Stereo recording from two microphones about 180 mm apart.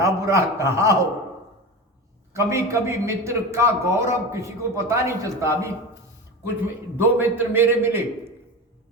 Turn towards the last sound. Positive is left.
turn(degrees=-10)  # may be behind; listen again after turning